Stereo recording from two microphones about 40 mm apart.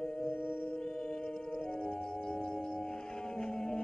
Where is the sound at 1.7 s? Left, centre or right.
Left.